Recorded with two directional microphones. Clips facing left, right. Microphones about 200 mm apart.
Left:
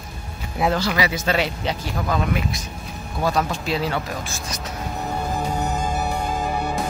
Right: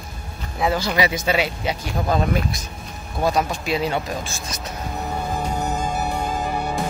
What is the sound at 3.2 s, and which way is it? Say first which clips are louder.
Speech: right 1 dB; 15° right (ahead or behind).